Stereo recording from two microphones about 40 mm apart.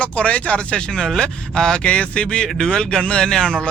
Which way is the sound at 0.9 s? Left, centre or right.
Centre.